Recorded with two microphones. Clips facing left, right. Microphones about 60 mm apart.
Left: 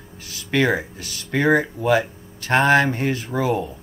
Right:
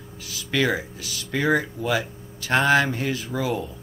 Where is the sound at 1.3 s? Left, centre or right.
Left.